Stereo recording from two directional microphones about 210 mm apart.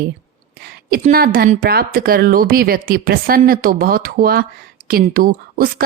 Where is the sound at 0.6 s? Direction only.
45° right (ahead or behind).